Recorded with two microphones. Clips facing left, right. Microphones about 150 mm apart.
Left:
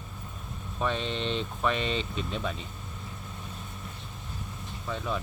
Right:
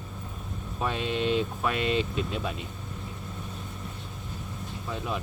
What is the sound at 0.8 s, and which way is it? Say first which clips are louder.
Speech: right 2 dB; 10° right (ahead or behind).